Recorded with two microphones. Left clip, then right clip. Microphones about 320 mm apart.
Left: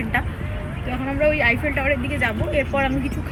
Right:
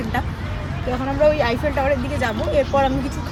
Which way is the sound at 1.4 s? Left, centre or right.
Centre.